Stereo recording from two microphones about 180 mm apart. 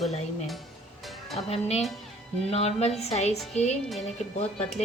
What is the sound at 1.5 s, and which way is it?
Speech, 35° left (ahead or behind).